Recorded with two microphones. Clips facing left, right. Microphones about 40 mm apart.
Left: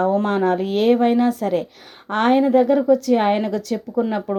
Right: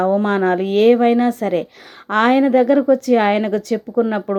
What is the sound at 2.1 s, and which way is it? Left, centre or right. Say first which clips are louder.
A woman's voice: right 2 dB; right.